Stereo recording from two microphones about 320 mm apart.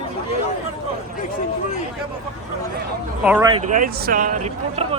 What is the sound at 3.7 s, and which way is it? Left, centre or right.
Speech, right.